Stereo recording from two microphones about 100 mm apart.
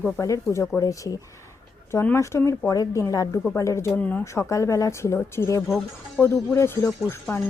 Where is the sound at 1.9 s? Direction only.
25° left (ahead or behind).